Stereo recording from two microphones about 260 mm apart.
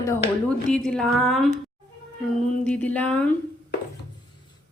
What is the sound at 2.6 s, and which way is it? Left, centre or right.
Speech, centre.